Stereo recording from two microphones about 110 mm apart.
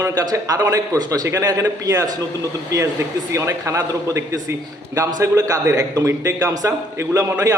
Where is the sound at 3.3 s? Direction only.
30° right (ahead or behind).